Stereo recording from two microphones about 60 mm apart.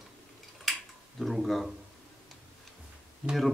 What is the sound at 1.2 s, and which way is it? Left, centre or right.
Speech, centre.